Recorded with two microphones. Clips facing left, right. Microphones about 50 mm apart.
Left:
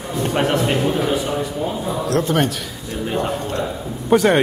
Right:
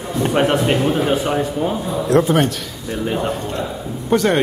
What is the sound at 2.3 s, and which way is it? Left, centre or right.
Speech, centre.